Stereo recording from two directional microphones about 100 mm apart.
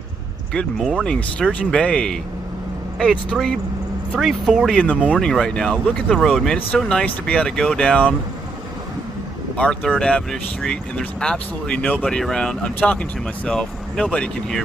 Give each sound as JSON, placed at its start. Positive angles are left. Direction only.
{"t": 0.7, "sound": "speech", "side_deg": -5}
{"t": 1.0, "sound": "speech", "side_deg": 10}
{"t": 4.9, "sound": "speech", "side_deg": -10}
{"t": 5.2, "sound": "speech", "side_deg": 5}
{"t": 9.9, "sound": "speech", "side_deg": 10}